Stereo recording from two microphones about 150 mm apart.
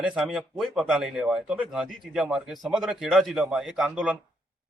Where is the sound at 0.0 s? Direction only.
5° right (ahead or behind).